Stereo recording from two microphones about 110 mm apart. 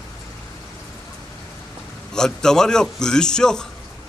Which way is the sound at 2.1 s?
5° left (ahead or behind).